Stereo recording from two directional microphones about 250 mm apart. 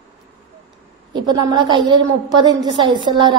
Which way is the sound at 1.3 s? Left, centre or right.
Centre.